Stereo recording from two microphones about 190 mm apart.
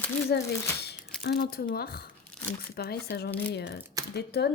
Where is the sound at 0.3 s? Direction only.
55° left (ahead or behind).